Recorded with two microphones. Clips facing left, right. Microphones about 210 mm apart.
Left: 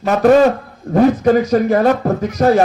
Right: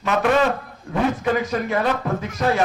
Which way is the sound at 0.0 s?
40° left (ahead or behind).